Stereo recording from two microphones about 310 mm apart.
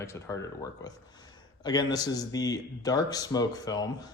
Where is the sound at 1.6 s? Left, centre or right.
Centre.